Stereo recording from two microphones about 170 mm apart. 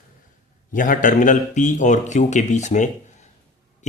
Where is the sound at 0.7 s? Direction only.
50° left (ahead or behind).